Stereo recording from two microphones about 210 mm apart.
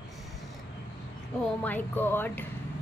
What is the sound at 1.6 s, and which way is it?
Speech, 10° left (ahead or behind).